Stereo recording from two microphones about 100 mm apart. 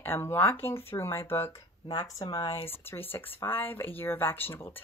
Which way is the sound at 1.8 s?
35° left (ahead or behind).